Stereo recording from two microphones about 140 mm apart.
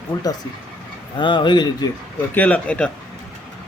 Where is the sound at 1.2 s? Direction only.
35° left (ahead or behind).